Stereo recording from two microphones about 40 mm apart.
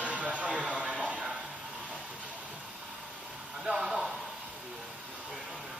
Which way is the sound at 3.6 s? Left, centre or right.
Centre.